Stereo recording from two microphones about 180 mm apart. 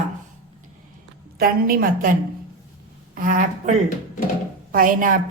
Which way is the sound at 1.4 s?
55° right (ahead or behind).